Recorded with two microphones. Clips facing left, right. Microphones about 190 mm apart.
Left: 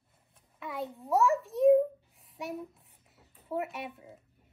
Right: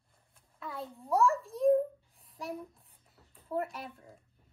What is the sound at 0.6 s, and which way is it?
A child's voice, centre (ahead or behind).